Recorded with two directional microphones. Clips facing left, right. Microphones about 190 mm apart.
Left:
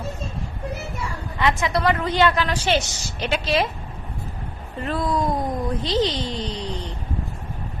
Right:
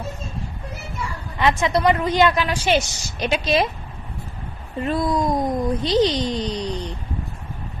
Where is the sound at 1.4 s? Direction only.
20° right (ahead or behind).